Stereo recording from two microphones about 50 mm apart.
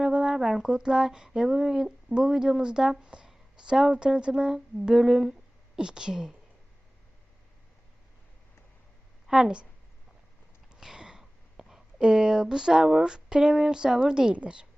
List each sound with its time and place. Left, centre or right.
0.0 s a sound: centre
0.3 s speech: centre
9.2 s a woman's voice: centre
10.8 s a woman's voice: centre